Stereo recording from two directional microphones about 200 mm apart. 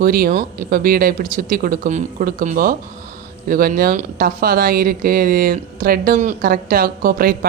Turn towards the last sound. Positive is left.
turn(degrees=-45)  # may be behind; listen again after turning